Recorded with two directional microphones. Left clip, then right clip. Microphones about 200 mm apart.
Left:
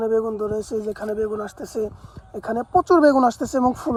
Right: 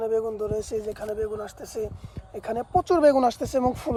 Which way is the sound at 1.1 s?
35° left (ahead or behind).